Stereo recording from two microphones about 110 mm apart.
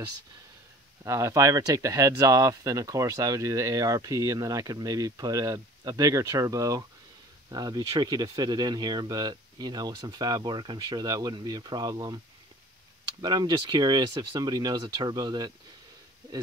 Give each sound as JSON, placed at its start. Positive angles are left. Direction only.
{"t": 1.0, "sound": "speech", "side_deg": -30}
{"t": 13.2, "sound": "speech", "side_deg": -40}